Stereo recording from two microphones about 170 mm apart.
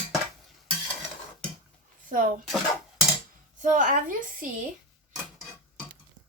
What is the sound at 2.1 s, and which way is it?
Speech, 50° right (ahead or behind).